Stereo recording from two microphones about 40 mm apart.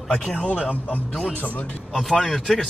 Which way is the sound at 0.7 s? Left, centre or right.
Left.